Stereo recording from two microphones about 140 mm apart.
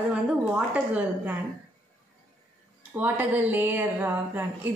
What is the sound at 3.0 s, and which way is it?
A woman's voice, 15° right (ahead or behind).